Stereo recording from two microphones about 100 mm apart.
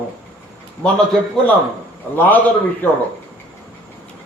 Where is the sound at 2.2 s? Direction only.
15° left (ahead or behind).